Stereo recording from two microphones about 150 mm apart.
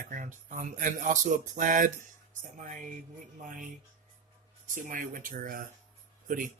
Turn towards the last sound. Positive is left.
turn(degrees=-65)  # may be behind; listen again after turning